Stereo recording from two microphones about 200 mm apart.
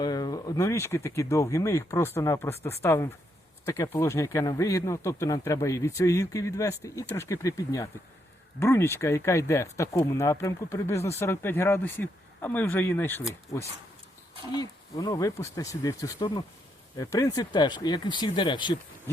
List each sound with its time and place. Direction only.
0.0 s a man's voice: 20° left (ahead or behind)